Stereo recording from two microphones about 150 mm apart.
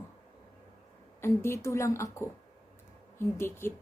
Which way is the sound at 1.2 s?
15° left (ahead or behind).